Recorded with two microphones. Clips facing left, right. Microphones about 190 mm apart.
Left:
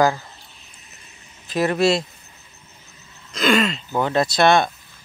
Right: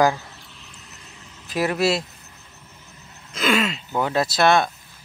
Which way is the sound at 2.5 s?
90° right.